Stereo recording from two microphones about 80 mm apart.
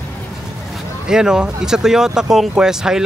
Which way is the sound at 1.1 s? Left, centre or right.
Centre.